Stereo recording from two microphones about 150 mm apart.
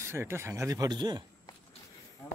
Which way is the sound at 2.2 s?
20° left (ahead or behind).